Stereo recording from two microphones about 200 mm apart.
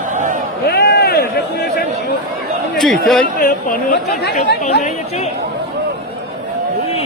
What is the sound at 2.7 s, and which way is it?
Speech, centre (ahead or behind).